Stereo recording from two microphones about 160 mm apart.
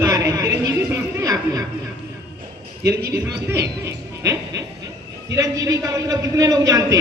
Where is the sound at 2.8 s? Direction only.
15° right (ahead or behind).